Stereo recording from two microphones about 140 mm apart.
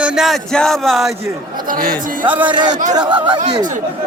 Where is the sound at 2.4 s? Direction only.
30° right (ahead or behind).